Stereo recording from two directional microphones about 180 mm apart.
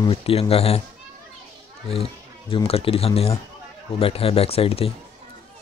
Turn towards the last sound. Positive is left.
turn(degrees=30)  # may be behind; listen again after turning